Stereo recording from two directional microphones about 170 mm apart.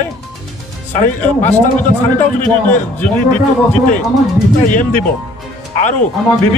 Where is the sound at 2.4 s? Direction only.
10° left (ahead or behind).